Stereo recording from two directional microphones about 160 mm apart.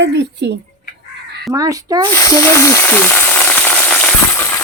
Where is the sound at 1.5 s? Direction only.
20° right (ahead or behind).